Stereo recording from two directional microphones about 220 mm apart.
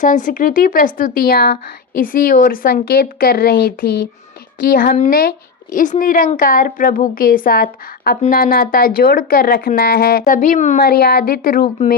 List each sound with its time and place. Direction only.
0.0 s a woman's voice: 35° left (ahead or behind)